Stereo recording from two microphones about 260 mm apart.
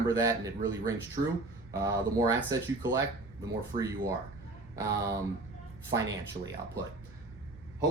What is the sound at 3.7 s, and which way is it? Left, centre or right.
Speech, right.